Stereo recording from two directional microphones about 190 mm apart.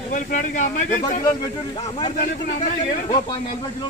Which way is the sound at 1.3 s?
20° left (ahead or behind).